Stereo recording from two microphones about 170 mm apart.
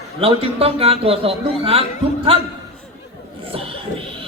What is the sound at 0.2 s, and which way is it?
A man's voice, 35° right (ahead or behind).